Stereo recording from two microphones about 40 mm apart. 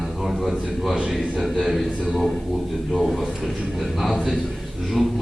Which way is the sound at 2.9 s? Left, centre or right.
Centre.